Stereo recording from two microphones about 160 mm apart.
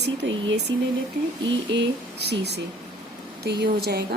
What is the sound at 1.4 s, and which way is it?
Speech, 90° right.